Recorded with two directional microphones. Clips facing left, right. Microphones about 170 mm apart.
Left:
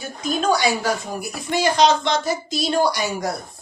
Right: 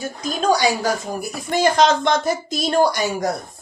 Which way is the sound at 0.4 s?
40° right (ahead or behind).